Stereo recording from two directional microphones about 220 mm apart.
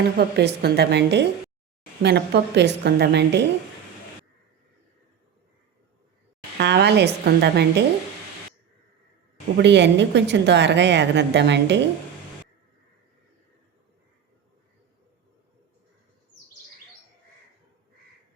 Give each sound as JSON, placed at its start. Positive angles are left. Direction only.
{"t": 0.0, "sound": "a woman's voice", "side_deg": -45}
{"t": 6.6, "sound": "a woman's voice", "side_deg": -50}
{"t": 9.6, "sound": "a woman's voice", "side_deg": -50}